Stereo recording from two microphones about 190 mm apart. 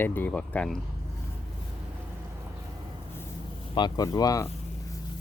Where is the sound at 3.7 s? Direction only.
20° left (ahead or behind).